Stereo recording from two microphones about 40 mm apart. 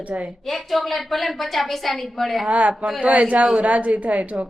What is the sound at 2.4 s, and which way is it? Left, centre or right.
Speech, right.